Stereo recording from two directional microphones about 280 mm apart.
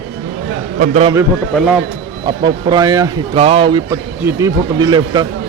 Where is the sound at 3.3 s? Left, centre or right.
Right.